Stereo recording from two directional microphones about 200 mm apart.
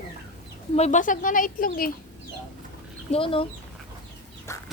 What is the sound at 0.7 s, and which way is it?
Speech, 35° left (ahead or behind).